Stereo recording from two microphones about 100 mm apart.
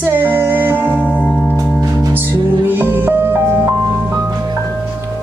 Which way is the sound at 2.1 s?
20° right (ahead or behind).